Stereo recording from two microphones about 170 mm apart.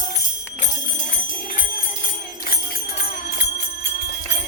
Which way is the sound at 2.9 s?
80° left.